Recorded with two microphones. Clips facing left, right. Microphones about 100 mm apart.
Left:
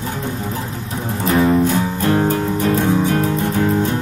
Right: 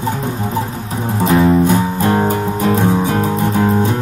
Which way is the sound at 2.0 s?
35° right (ahead or behind).